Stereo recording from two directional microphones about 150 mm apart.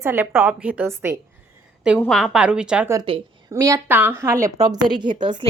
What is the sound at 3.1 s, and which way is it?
Speech, 35° right (ahead or behind).